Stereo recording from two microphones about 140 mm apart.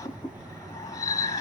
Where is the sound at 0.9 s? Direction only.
25° left (ahead or behind).